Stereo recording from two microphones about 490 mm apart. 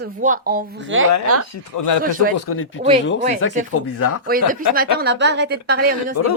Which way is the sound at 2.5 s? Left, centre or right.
Left.